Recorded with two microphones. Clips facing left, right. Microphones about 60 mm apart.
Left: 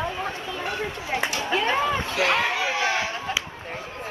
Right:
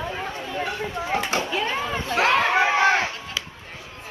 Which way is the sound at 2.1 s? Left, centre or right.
Right.